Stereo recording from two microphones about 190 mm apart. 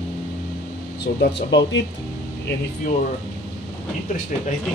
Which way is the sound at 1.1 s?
65° left (ahead or behind).